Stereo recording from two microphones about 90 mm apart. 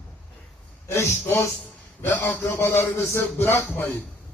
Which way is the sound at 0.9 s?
30° left (ahead or behind).